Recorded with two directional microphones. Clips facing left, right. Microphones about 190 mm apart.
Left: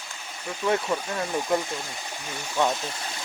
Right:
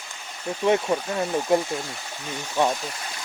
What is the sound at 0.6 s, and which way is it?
Speech, 20° right (ahead or behind).